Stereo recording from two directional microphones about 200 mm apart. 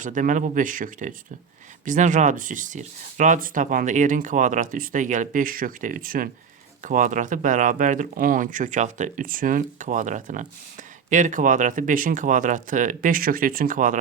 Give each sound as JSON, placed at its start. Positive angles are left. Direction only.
{"t": 0.0, "sound": "speech", "side_deg": -40}